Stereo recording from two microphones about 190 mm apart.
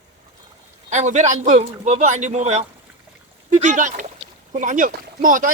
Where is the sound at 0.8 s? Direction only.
40° right (ahead or behind).